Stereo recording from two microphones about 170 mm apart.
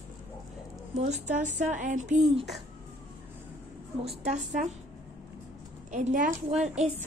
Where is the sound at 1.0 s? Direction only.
45° right (ahead or behind).